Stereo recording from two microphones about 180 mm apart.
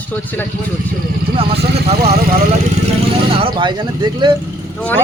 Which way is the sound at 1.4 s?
30° right (ahead or behind).